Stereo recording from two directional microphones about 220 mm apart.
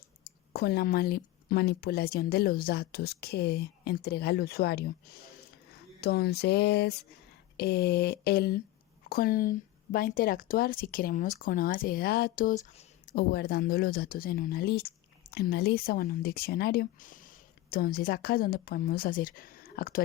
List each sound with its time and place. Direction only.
0.5 s speech: 45° left (ahead or behind)